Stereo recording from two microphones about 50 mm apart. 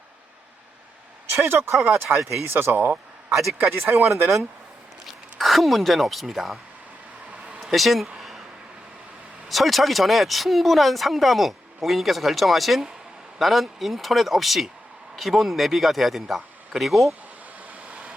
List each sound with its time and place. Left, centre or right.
1.4 s speech: right
5.0 s speech: centre
7.6 s a sound: centre
9.5 s speech: centre